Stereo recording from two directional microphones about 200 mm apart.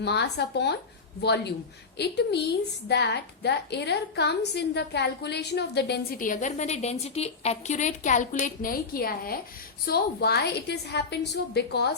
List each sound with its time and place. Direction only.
0.0 s a woman's voice: 55° left (ahead or behind)